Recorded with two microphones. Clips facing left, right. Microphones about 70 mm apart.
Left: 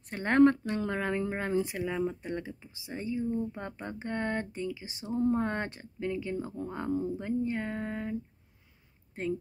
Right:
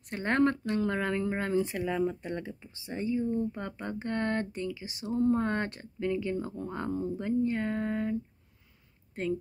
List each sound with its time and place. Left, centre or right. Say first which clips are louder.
0.1 s speech: left 4 dB; left
4.5 s a sound: right 1 dB; left
5.1 s speech: right 1 dB; centre